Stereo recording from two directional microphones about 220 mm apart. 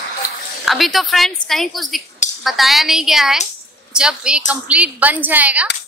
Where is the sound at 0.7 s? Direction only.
Centre (ahead or behind).